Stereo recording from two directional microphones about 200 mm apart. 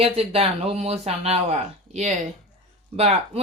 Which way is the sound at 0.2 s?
30° right (ahead or behind).